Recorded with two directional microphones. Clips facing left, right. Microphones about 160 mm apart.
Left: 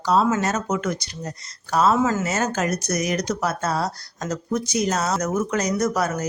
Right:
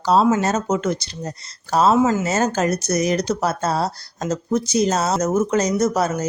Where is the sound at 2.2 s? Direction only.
30° right (ahead or behind).